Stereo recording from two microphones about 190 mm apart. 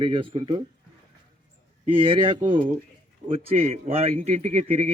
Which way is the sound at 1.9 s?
30° right (ahead or behind).